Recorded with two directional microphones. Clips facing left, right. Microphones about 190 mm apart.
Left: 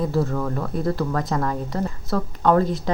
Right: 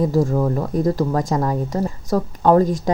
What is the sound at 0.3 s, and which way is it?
Speech, 25° right (ahead or behind).